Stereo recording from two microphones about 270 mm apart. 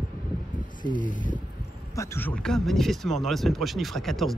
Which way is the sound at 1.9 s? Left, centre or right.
Centre.